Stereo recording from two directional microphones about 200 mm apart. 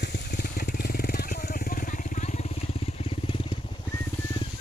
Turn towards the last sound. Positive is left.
turn(degrees=25)  # may be behind; listen again after turning